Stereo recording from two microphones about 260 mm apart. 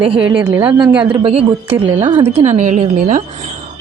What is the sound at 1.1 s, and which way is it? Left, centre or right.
A woman's voice, right.